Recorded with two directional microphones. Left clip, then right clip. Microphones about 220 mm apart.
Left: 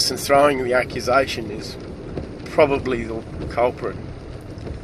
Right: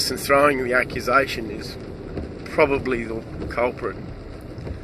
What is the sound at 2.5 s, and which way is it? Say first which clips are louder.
Speech: left 2 dB; 40° left (ahead or behind).